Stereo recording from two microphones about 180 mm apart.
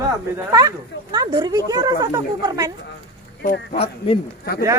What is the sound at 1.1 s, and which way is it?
Speech, 25° right (ahead or behind).